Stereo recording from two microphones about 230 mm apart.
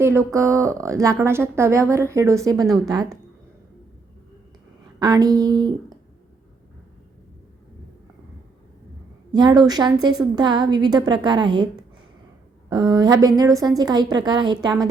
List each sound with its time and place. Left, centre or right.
0.0 s a woman's voice: centre
4.9 s a woman's voice: centre
9.3 s a woman's voice: centre
12.7 s a woman's voice: centre